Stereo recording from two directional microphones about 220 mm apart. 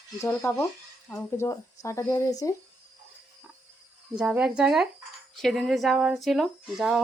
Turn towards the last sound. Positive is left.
turn(degrees=0)  # may be behind; listen again after turning